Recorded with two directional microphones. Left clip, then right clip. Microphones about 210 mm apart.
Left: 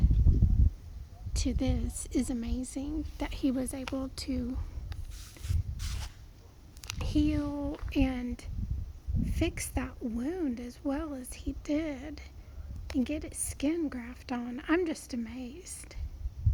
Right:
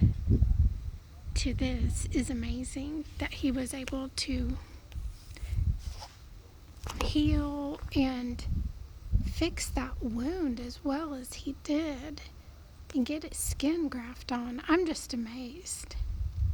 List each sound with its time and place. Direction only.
1.3 s a woman's voice: 10° left (ahead or behind)
7.0 s a woman's voice: centre (ahead or behind)